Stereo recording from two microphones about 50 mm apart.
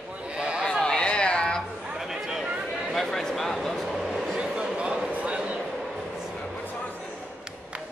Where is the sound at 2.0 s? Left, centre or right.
Centre.